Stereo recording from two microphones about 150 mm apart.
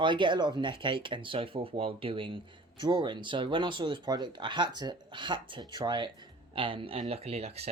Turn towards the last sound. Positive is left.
turn(degrees=-45)  # may be behind; listen again after turning